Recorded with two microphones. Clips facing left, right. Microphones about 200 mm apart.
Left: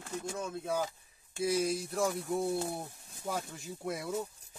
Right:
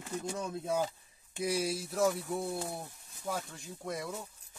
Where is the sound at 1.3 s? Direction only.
15° right (ahead or behind); by 4.1 s 5° left (ahead or behind).